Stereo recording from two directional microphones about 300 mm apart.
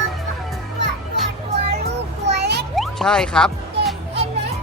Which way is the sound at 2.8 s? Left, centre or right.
Centre.